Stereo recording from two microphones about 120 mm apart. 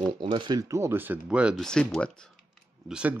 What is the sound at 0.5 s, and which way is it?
Speech, 25° right (ahead or behind).